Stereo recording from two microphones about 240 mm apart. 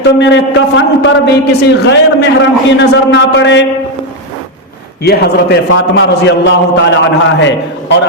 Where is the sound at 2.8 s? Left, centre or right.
Left.